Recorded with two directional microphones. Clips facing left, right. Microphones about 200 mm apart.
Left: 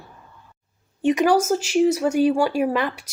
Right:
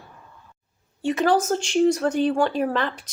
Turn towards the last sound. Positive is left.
turn(degrees=10)  # may be behind; listen again after turning